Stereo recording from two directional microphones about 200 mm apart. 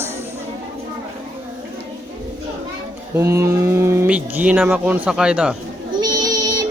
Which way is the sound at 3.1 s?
15° right (ahead or behind).